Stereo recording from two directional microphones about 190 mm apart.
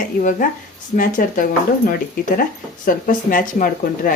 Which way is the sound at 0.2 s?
45° left (ahead or behind).